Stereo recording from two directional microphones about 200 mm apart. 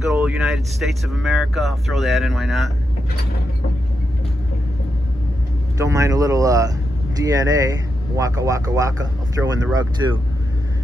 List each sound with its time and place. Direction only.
0.1 s speech: 5° right (ahead or behind)
5.8 s speech: 15° right (ahead or behind)